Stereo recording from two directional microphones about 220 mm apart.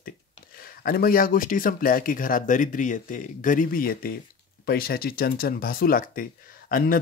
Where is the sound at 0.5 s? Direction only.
40° left (ahead or behind).